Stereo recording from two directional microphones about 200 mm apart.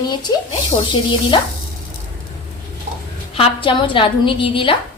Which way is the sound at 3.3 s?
25° left (ahead or behind).